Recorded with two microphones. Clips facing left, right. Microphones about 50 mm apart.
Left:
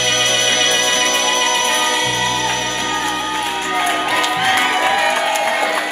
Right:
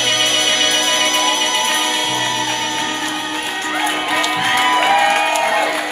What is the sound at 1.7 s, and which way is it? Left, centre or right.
Music, centre.